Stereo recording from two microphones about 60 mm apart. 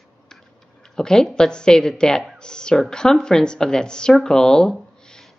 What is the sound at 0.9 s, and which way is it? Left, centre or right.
Speech, centre.